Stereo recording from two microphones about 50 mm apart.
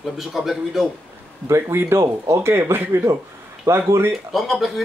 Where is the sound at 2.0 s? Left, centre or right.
Right.